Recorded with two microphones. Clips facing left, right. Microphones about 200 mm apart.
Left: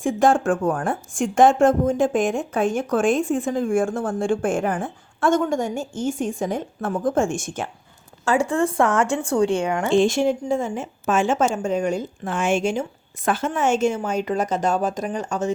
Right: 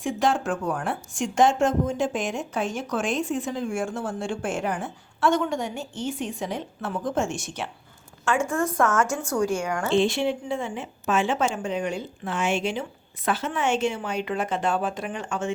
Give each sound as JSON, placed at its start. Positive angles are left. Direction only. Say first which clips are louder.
{"t": 0.0, "sound": "speech", "louder": "left 6 dB", "side_deg": 50}
{"t": 8.2, "sound": "a woman's voice", "louder": "left 4 dB", "side_deg": 35}
{"t": 9.9, "sound": "a woman's voice", "louder": "left 4 dB", "side_deg": 45}